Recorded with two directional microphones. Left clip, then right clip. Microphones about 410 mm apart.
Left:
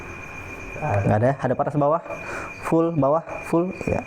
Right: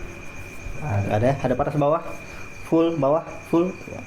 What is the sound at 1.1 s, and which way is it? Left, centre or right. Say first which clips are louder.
Speech: right 1 dB; left.